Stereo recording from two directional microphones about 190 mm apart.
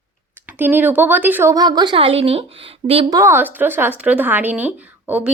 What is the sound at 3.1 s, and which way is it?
A woman's voice, 15° right (ahead or behind).